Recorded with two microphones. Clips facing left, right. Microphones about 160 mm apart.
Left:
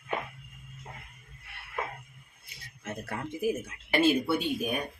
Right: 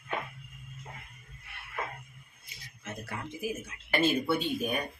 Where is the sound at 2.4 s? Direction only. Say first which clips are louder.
Left 3 dB; 55° left (ahead or behind).